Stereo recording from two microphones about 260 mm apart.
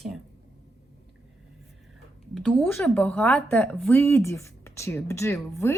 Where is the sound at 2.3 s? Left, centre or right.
Centre.